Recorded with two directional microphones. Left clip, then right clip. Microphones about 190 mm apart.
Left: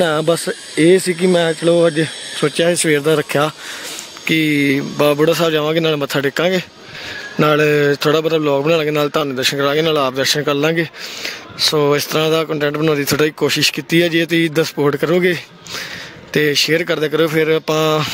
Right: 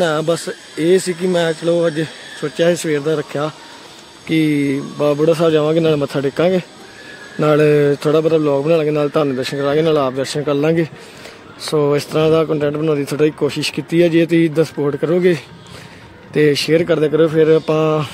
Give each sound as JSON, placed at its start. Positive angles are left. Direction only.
{"t": 0.0, "sound": "speech", "side_deg": 35}
{"t": 4.2, "sound": "speech", "side_deg": 10}